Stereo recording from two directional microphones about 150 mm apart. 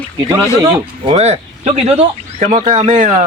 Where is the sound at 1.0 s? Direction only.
40° right (ahead or behind).